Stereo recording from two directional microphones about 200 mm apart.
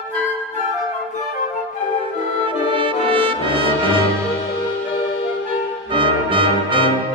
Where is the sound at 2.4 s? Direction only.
25° right (ahead or behind).